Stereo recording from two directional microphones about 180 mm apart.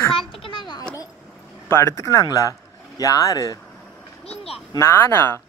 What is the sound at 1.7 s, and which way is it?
Speech, 15° left (ahead or behind).